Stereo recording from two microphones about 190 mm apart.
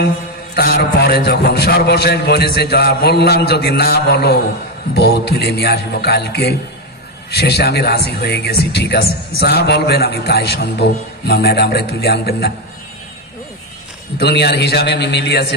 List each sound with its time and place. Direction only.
0.6 s speech: 55° left (ahead or behind)
14.1 s speech: 60° left (ahead or behind)